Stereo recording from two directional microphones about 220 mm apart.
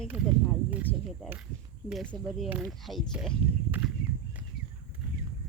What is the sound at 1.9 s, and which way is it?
Speech, centre (ahead or behind).